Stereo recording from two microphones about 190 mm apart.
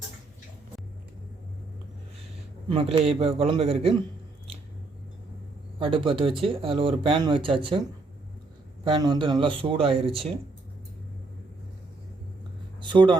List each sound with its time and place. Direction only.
2.6 s a man's voice: 30° right (ahead or behind)
5.8 s speech: 25° right (ahead or behind)
8.8 s speech: 25° right (ahead or behind)
12.8 s a sound: 25° right (ahead or behind)